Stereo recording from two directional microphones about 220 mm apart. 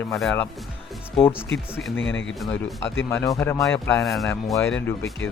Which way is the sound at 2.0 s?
60° left (ahead or behind).